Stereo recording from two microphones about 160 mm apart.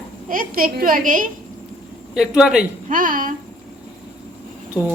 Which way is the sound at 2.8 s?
60° right (ahead or behind).